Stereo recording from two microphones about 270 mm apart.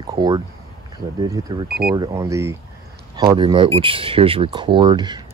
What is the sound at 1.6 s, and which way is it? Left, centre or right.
Speech, right.